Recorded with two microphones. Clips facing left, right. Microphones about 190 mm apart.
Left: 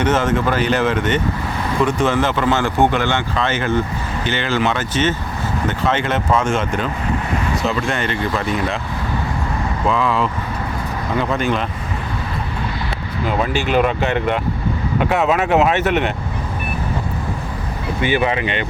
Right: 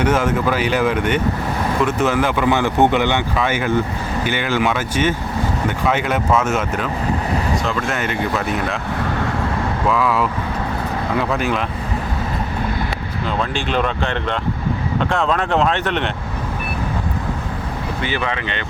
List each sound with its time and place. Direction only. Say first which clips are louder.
0.0 s speech: even; 10° right (ahead or behind)
9.9 s speech: even; 5° right (ahead or behind)
13.4 s speech: left 4 dB; 10° left (ahead or behind)
18.0 s speech: left 7 dB; 15° left (ahead or behind)